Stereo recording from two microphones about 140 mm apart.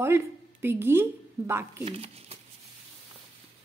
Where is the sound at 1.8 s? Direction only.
45° right (ahead or behind).